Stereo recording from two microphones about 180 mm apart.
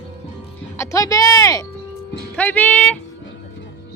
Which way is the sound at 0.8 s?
20° left (ahead or behind).